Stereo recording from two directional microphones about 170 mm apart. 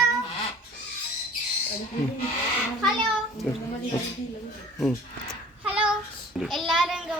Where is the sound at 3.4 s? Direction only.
Centre (ahead or behind).